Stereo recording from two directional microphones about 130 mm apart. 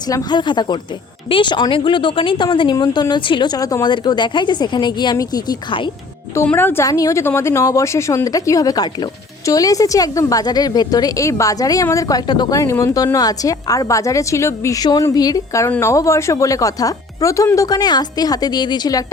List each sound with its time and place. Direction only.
0.1 s speech: 30° left (ahead or behind)
6.3 s a woman's voice: 15° left (ahead or behind); by 19.0 s 30° left (ahead or behind)